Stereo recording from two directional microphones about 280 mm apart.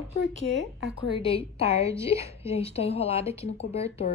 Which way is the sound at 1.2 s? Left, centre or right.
Left.